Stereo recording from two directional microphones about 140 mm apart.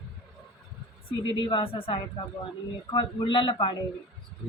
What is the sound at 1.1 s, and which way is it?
A woman's voice, 35° left (ahead or behind).